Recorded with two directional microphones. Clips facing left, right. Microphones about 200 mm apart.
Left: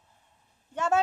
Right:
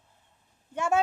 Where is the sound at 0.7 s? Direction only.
10° right (ahead or behind).